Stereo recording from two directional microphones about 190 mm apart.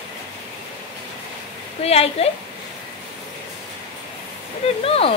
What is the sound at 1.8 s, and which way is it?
Speech, 30° left (ahead or behind).